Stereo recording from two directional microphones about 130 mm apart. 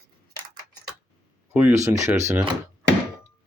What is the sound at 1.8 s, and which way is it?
Speech, 25° right (ahead or behind).